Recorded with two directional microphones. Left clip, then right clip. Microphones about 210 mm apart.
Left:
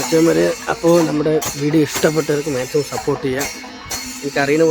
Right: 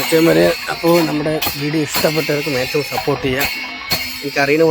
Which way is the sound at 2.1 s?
5° left (ahead or behind).